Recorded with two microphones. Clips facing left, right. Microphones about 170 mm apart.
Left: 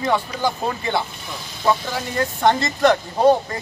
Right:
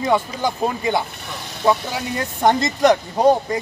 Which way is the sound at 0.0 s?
15° right (ahead or behind).